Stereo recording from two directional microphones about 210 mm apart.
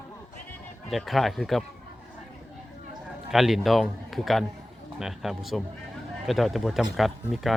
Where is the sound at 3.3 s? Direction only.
Centre (ahead or behind).